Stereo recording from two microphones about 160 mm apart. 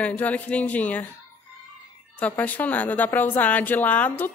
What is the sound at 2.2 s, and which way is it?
Speech, 10° left (ahead or behind).